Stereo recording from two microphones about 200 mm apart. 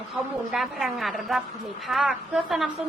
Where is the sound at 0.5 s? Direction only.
Centre (ahead or behind).